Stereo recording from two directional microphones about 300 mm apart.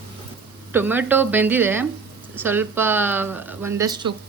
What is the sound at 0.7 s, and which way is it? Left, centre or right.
Speech, centre.